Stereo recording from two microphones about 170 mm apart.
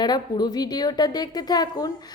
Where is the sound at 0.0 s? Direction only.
25° left (ahead or behind).